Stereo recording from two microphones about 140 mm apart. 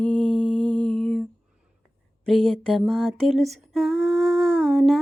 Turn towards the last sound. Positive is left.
turn(degrees=0)  # may be behind; listen again after turning